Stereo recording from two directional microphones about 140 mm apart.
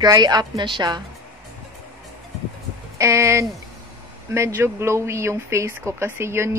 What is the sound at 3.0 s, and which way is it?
Speech, 20° right (ahead or behind).